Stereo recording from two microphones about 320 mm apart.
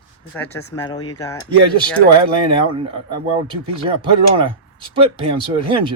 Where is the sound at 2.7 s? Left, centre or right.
Centre.